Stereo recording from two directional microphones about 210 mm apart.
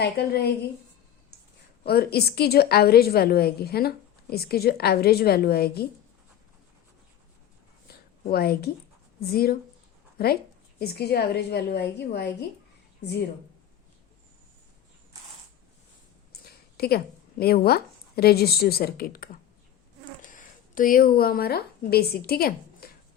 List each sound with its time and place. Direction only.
0.0 s a woman's voice: 50° left (ahead or behind)
1.8 s a woman's voice: 50° left (ahead or behind)
7.9 s a sound: 45° left (ahead or behind)
9.2 s a woman's voice: 45° left (ahead or behind)
16.3 s speech: 50° left (ahead or behind)
20.2 s a sound: 40° left (ahead or behind)
21.2 s a woman's voice: 45° left (ahead or behind)